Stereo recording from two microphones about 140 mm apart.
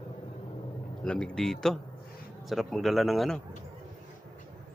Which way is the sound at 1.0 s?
5° left (ahead or behind).